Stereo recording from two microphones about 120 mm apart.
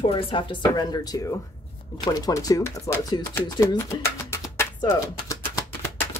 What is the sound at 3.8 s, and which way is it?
Music, 25° left (ahead or behind).